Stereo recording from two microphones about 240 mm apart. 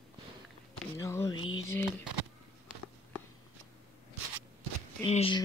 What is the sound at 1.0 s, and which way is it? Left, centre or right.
Speech, centre.